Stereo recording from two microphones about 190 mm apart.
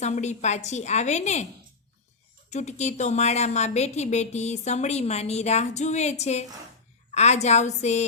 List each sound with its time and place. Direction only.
0.0 s a woman's voice: 35° left (ahead or behind)
2.5 s a woman's voice: 35° left (ahead or behind)